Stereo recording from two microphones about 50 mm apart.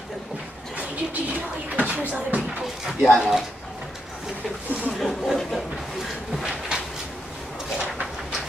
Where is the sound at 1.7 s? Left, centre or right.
Right.